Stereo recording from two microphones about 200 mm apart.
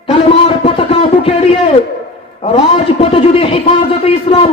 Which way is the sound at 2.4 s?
30° left (ahead or behind).